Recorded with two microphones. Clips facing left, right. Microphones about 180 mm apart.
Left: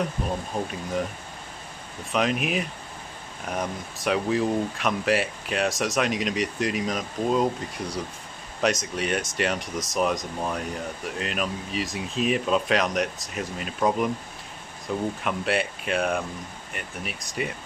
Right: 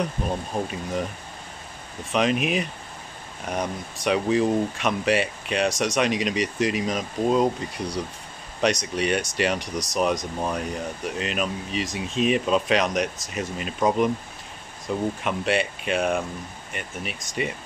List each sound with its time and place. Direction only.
0.5 s speech: 20° right (ahead or behind)
2.1 s speech: centre (ahead or behind)